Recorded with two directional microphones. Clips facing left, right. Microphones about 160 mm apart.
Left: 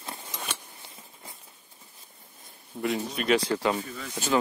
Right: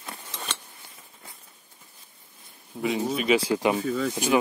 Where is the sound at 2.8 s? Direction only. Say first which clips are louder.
Right 3 dB; centre (ahead or behind).